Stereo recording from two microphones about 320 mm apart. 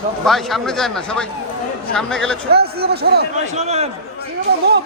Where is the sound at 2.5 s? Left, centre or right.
Right.